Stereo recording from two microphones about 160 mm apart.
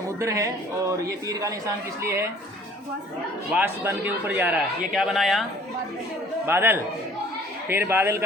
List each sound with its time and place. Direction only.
0.2 s a man's voice: 20° right (ahead or behind)
3.5 s a man's voice: 10° right (ahead or behind)
6.4 s a man's voice: 15° right (ahead or behind)